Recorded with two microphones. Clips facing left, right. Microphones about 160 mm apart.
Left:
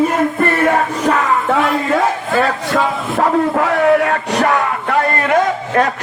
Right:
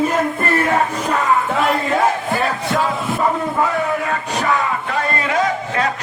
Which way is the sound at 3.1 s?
80° left.